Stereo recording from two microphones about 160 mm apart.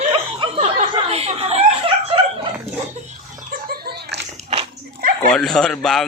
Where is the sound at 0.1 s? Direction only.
35° right (ahead or behind).